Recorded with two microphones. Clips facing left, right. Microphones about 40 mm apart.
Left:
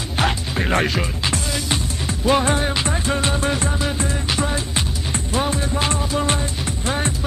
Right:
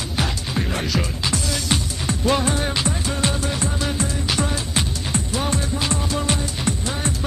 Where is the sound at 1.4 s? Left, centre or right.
Centre.